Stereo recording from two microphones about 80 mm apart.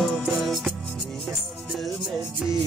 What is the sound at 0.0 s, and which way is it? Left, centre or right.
Music, centre.